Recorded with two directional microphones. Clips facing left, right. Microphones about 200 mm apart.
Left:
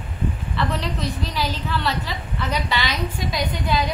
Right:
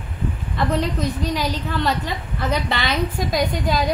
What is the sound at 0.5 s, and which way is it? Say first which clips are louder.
A woman's voice: right 6 dB; 45° right (ahead or behind).